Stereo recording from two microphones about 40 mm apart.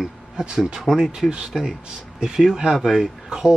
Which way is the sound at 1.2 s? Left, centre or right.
Centre.